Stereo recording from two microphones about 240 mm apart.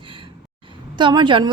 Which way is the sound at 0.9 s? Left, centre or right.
Centre.